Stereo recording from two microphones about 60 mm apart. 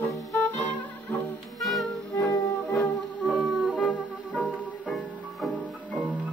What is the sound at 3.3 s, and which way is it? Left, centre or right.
Music, right.